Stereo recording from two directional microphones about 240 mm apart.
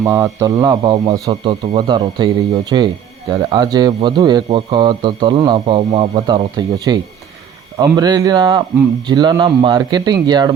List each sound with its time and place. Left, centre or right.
0.0 s a man's voice: centre